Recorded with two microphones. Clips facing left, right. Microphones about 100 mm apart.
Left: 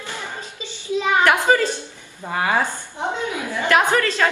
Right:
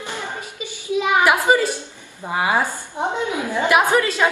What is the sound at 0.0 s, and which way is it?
Music, 15° right (ahead or behind).